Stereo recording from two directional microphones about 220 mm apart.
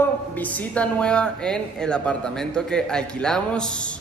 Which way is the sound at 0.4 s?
5° left (ahead or behind).